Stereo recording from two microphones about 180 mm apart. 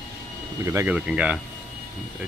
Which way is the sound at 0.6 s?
15° right (ahead or behind).